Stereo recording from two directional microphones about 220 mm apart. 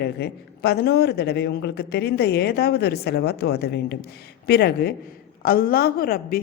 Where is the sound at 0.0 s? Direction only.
50° left (ahead or behind).